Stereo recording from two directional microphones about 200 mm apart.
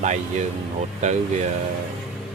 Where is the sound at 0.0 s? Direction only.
35° right (ahead or behind).